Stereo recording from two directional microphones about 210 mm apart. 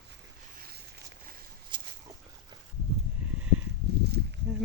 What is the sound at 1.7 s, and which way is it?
Dog, 20° right (ahead or behind).